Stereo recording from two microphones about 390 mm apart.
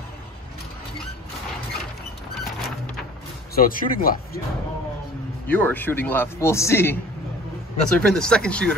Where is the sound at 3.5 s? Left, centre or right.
Left.